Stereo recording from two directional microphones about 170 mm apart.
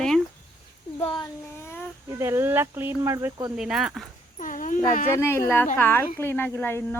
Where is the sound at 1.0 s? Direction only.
30° left (ahead or behind).